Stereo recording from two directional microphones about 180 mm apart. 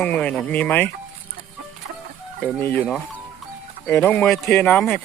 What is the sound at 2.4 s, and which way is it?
Speech, 10° left (ahead or behind).